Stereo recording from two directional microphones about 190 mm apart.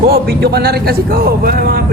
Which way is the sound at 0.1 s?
55° right (ahead or behind).